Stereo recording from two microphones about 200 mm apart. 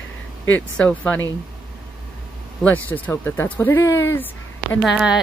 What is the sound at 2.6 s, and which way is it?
Speech, 10° left (ahead or behind).